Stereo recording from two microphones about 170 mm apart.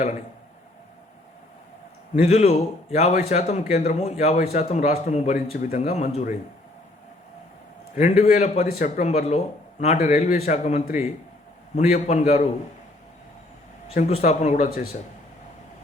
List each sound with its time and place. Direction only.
2.1 s speech: 40° left (ahead or behind)
7.9 s speech: 45° left (ahead or behind)
13.9 s speech: 45° left (ahead or behind)